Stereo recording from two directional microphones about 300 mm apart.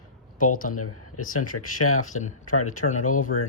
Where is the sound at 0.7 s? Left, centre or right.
Left.